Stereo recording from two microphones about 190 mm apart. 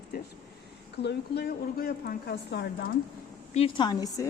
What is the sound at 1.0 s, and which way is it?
A woman's voice, 55° left (ahead or behind).